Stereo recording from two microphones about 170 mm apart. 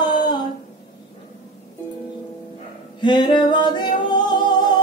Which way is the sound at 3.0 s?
25° left (ahead or behind).